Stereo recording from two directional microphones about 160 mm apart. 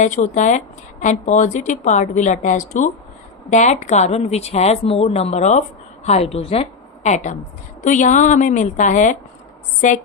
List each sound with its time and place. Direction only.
0.0 s speech: 50° left (ahead or behind)
7.8 s speech: 50° left (ahead or behind)